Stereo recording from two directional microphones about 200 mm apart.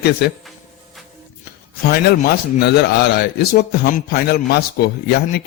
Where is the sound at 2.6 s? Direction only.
55° left (ahead or behind).